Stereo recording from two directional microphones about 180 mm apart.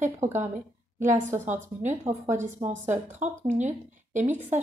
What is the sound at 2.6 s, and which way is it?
Speech, 10° right (ahead or behind).